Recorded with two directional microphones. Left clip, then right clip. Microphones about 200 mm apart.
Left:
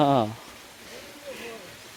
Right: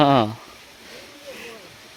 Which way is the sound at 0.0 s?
25° right (ahead or behind).